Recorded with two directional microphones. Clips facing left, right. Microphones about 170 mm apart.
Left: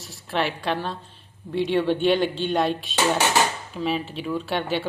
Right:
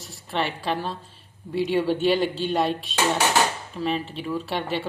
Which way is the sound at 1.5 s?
5° right (ahead or behind).